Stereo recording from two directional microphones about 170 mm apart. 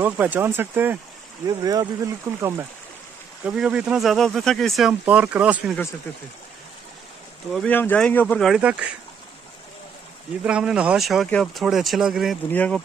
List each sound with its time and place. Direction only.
0.0 s speech: 10° right (ahead or behind)
1.5 s speech: 25° right (ahead or behind)
3.4 s speech: 5° right (ahead or behind)
7.5 s speech: 10° left (ahead or behind)
10.4 s speech: 5° right (ahead or behind)
12.4 s speech: 10° left (ahead or behind)